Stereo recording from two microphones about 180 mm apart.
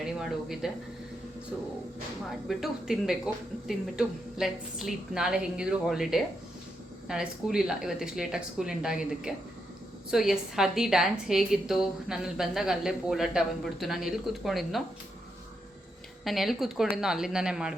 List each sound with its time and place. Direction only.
0.0 s a woman's voice: centre (ahead or behind)
2.5 s a woman's voice: centre (ahead or behind)
16.2 s a woman's voice: centre (ahead or behind)